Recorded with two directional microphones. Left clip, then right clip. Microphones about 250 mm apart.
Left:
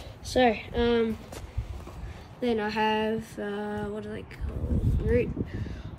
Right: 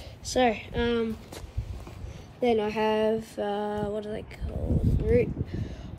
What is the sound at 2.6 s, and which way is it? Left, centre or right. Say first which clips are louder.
Speech: right 1 dB; centre.